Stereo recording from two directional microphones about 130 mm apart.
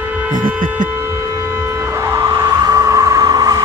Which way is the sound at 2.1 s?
20° right (ahead or behind).